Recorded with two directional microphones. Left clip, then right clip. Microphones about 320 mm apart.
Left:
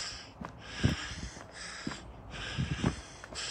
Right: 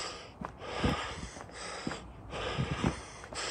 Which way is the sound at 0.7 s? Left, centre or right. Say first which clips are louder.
Right 3 dB; centre.